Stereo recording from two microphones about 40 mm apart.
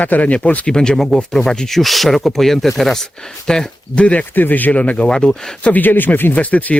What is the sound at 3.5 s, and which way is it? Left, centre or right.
Speech, centre.